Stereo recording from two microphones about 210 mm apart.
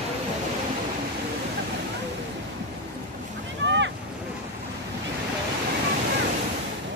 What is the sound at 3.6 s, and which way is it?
Boat, 60° right (ahead or behind).